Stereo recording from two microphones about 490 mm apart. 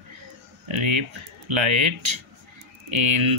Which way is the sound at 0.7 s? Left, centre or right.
Right.